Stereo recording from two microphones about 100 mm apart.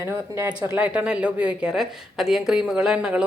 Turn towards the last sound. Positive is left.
turn(degrees=-10)  # may be behind; listen again after turning